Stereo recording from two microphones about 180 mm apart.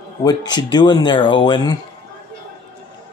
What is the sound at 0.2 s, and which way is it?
Speech, 20° left (ahead or behind).